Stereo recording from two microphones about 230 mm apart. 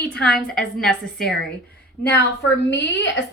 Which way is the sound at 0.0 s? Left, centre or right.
Centre.